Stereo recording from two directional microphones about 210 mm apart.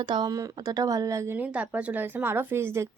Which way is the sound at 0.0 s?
20° right (ahead or behind).